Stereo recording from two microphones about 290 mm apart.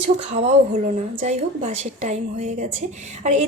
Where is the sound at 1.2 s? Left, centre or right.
Right.